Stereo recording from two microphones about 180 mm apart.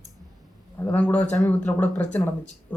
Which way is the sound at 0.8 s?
5° left (ahead or behind).